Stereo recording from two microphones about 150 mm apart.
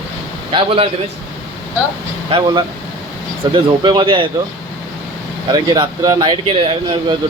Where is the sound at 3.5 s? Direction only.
30° right (ahead or behind).